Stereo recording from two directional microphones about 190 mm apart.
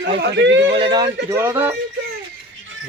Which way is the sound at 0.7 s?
25° right (ahead or behind).